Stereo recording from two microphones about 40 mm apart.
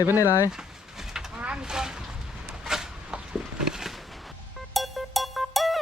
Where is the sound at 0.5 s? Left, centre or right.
Centre.